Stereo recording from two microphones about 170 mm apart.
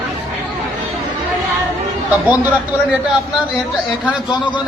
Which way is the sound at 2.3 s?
10° right (ahead or behind).